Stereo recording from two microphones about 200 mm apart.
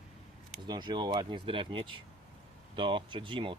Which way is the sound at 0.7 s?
20° right (ahead or behind).